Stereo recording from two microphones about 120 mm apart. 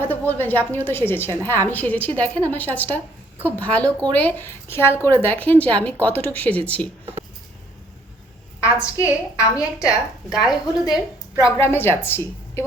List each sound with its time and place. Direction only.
0.0 s a woman's voice: 15° left (ahead or behind)
8.6 s a woman's voice: 25° left (ahead or behind)
9.8 s a woman's voice: 5° right (ahead or behind)
11.5 s a woman's voice: 20° left (ahead or behind)